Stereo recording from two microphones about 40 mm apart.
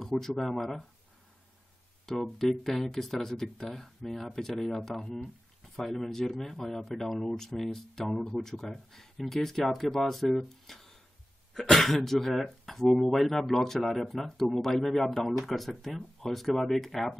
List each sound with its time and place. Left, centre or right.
0.0 s speech: centre
2.1 s speech: centre
5.8 s speech: centre